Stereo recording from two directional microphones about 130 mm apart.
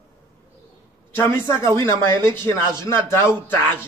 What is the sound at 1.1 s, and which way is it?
Speech, 20° left (ahead or behind).